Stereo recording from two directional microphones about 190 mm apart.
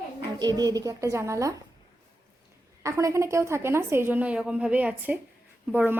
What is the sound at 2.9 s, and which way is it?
A woman's voice, 15° right (ahead or behind).